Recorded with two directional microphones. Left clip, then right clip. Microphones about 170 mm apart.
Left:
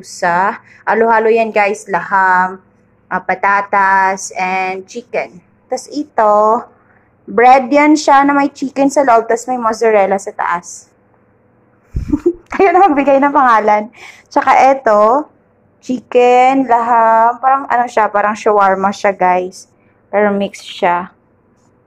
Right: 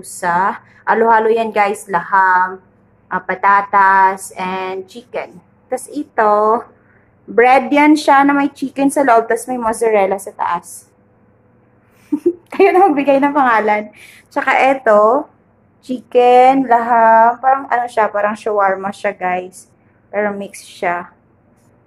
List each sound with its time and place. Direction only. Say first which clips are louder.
0.0 s a woman's voice: left 2 dB; 15° left (ahead or behind)
12.4 s a woman's voice: left 1 dB; 20° left (ahead or behind)